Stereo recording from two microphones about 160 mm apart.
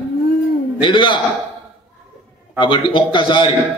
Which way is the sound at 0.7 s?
30° left (ahead or behind).